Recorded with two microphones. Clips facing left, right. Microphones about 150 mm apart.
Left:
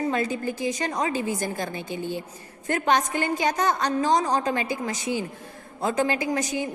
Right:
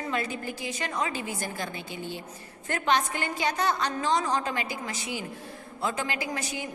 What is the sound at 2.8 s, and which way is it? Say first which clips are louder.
A woman's voice: left 3 dB; 45° left (ahead or behind).